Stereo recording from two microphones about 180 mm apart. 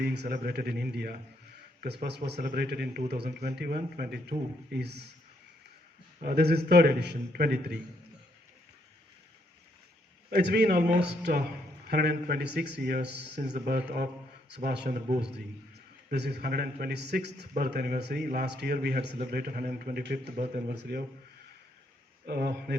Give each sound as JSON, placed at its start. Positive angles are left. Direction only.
{"t": 0.0, "sound": "a man's voice", "side_deg": -65}
{"t": 6.2, "sound": "a man's voice", "side_deg": -65}
{"t": 10.2, "sound": "a man's voice", "side_deg": -60}
{"t": 14.8, "sound": "a man's voice", "side_deg": -45}
{"t": 16.1, "sound": "a man's voice", "side_deg": -70}
{"t": 22.3, "sound": "a man's voice", "side_deg": -65}